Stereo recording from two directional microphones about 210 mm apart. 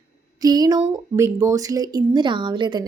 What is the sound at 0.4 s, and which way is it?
A woman's voice, 20° right (ahead or behind).